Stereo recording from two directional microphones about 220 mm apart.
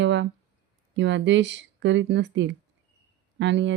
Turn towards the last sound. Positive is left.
turn(degrees=-55)  # may be behind; listen again after turning